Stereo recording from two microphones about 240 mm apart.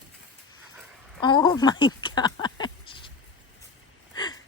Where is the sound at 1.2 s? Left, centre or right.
Centre.